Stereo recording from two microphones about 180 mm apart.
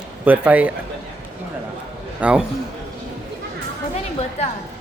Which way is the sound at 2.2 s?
5° right (ahead or behind).